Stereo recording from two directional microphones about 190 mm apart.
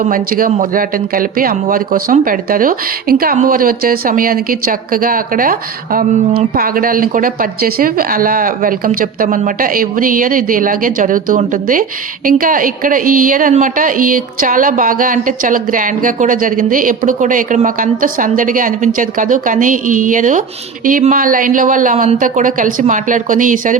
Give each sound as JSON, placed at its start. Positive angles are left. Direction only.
{"t": 0.1, "sound": "speech", "side_deg": -50}